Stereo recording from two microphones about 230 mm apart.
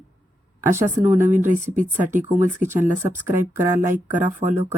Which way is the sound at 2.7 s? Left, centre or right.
Centre.